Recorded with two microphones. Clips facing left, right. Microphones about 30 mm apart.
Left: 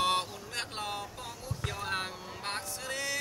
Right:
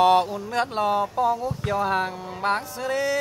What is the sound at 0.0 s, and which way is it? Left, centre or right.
Music, centre.